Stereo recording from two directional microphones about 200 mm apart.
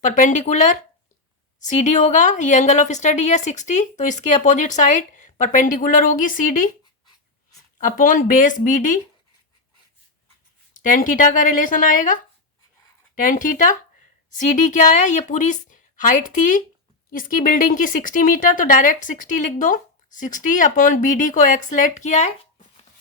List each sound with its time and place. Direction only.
0.0 s speech: 40° left (ahead or behind)
7.8 s speech: 40° left (ahead or behind)
10.8 s speech: 40° left (ahead or behind)